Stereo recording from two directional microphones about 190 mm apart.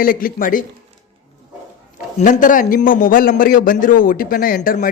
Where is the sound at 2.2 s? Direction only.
45° left (ahead or behind).